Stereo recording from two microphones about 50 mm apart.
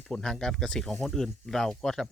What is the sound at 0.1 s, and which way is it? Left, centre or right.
Speech, centre.